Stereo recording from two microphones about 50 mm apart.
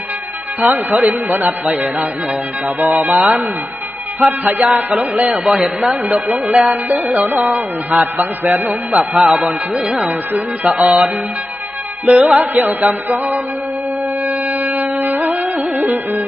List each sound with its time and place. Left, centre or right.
0.6 s music: right
4.2 s music: right
4.6 s a sound: right
5.3 s a man's voice: centre
6.2 s music: right
9.0 s a man's voice: centre
9.3 s a sound: right
9.8 s a man's voice: centre
10.1 s music: right
10.7 s a sound: centre
12.4 s music: right